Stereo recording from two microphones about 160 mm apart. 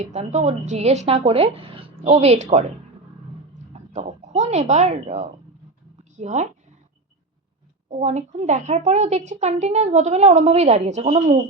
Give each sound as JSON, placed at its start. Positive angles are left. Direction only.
{"t": 0.0, "sound": "speech", "side_deg": -45}
{"t": 3.7, "sound": "speech", "side_deg": -45}
{"t": 7.9, "sound": "speech", "side_deg": -45}